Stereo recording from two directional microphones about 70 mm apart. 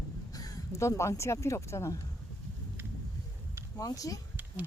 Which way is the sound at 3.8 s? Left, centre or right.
Left.